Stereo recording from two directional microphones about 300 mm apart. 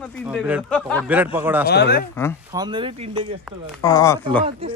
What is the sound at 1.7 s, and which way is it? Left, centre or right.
Speech, left.